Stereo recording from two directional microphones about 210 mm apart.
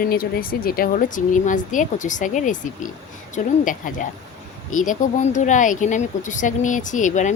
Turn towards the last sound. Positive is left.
turn(degrees=35)  # may be behind; listen again after turning